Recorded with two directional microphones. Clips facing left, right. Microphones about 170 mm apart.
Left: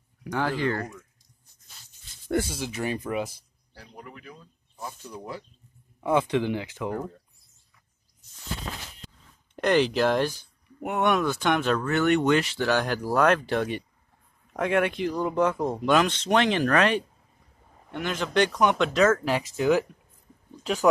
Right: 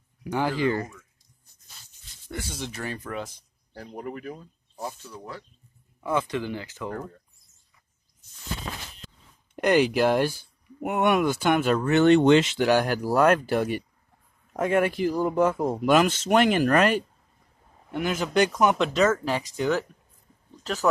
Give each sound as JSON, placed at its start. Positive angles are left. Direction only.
{"t": 0.2, "sound": "speech", "side_deg": -5}
{"t": 2.5, "sound": "speech", "side_deg": 5}
{"t": 2.8, "sound": "speech", "side_deg": 15}
{"t": 3.7, "sound": "speech", "side_deg": -45}
{"t": 5.1, "sound": "speech", "side_deg": 15}
{"t": 9.6, "sound": "speech", "side_deg": -10}
{"t": 11.9, "sound": "speech", "side_deg": -25}